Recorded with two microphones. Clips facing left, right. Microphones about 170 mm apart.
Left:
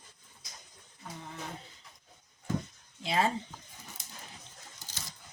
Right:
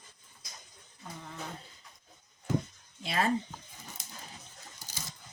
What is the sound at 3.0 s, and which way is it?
Speech, 25° left (ahead or behind).